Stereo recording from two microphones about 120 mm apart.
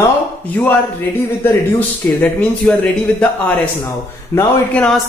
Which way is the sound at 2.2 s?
5° left (ahead or behind).